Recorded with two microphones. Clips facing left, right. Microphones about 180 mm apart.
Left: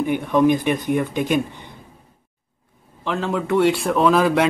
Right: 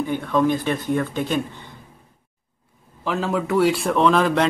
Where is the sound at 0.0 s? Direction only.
15° left (ahead or behind).